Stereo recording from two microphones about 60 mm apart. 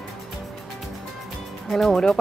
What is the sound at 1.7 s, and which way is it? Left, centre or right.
Speech, centre.